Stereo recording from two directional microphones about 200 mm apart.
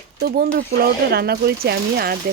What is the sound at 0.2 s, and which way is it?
Speech, 50° right (ahead or behind).